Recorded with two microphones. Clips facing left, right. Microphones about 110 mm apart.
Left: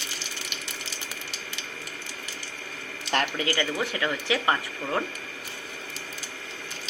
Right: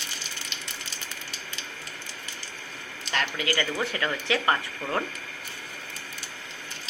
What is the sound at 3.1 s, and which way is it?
Speech, 45° left (ahead or behind).